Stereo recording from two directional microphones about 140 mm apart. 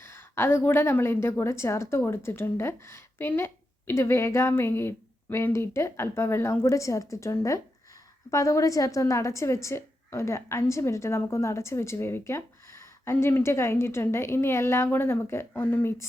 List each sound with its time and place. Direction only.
0.0 s a woman's voice: 15° left (ahead or behind)